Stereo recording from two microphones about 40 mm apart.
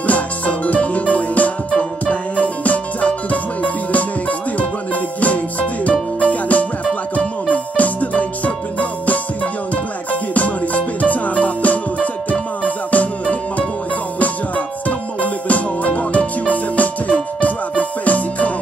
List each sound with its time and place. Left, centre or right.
0.0 s music: left
10.3 s music: left
14.9 s music: left